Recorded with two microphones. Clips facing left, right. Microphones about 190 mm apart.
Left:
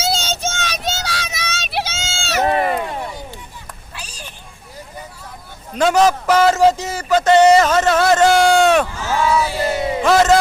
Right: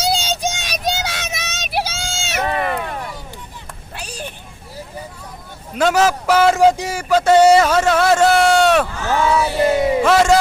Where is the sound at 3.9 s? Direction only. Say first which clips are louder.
Right 7 dB; 60° right (ahead or behind).